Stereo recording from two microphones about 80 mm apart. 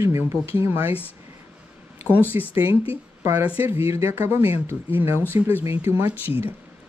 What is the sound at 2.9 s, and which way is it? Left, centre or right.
Speech, right.